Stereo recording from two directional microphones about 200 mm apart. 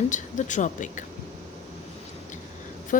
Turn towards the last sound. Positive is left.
turn(degrees=40)  # may be behind; listen again after turning